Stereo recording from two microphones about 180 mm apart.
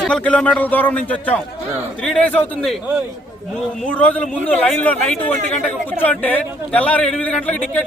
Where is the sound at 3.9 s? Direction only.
5° left (ahead or behind).